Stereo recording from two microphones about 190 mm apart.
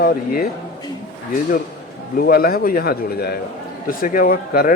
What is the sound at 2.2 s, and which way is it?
Speech, 50° left (ahead or behind).